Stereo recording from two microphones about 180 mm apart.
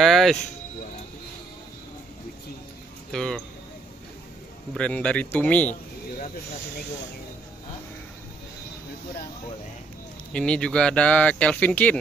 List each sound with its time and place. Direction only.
0.0 s music: centre (ahead or behind)
3.1 s speech: 5° left (ahead or behind)
4.7 s speech: 5° left (ahead or behind)
10.3 s speech: 5° left (ahead or behind)